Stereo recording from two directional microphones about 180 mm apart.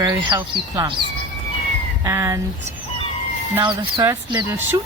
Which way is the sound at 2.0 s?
15° right (ahead or behind).